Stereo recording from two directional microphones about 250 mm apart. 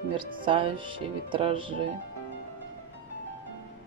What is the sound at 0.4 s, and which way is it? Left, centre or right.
Speech, centre.